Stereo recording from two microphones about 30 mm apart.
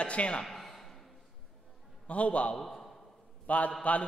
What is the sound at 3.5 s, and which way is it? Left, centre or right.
Speech, left.